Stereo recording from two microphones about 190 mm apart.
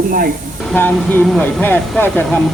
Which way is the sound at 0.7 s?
10° left (ahead or behind).